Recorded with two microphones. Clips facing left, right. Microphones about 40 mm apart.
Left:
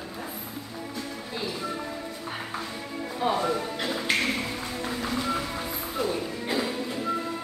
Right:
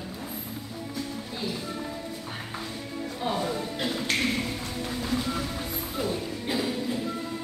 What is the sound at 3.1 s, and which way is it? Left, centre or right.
Music, centre.